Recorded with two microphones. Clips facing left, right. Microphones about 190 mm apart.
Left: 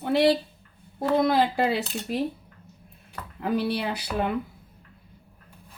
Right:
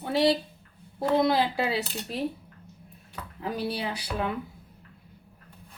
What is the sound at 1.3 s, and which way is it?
Speech, 55° left (ahead or behind).